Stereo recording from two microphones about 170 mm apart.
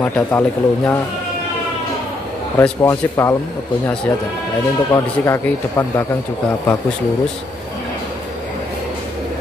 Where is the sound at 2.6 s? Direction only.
15° left (ahead or behind).